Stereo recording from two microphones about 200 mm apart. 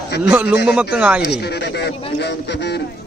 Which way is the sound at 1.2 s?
55° left (ahead or behind).